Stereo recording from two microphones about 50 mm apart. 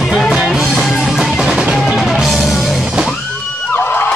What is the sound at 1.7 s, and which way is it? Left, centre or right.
Music, centre.